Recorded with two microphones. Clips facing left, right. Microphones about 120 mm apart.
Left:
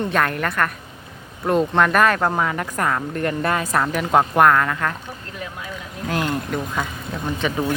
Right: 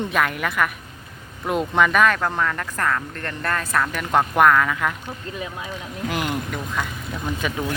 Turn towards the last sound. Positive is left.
turn(degrees=-5)  # may be behind; listen again after turning